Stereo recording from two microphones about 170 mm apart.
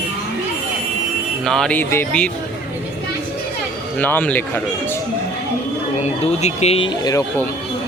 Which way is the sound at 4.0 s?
10° left (ahead or behind).